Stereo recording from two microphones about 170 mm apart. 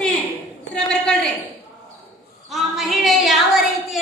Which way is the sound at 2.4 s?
Centre (ahead or behind).